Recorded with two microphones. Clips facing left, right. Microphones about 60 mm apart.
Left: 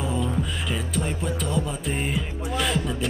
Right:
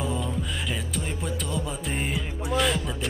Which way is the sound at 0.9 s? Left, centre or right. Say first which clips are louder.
Left 4 dB; centre.